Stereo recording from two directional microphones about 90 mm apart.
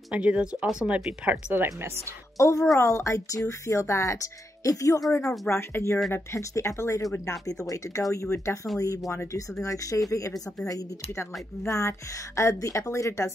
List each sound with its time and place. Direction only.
0.1 s speech: 15° right (ahead or behind)
1.3 s speech: 25° right (ahead or behind)
2.3 s speech: 35° left (ahead or behind)
5.2 s speech: centre (ahead or behind)
5.5 s speech: 30° left (ahead or behind)